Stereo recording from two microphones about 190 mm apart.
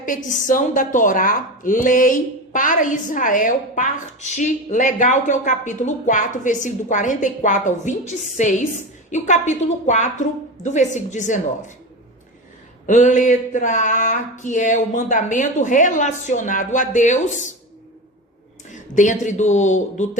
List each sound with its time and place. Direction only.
0.3 s a woman's voice: 45° left (ahead or behind)
12.9 s a woman's voice: 40° left (ahead or behind)
18.7 s a woman's voice: 40° left (ahead or behind)